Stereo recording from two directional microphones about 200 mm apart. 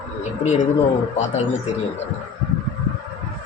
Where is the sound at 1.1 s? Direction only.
35° left (ahead or behind).